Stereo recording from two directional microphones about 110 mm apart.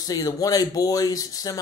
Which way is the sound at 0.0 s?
35° left (ahead or behind).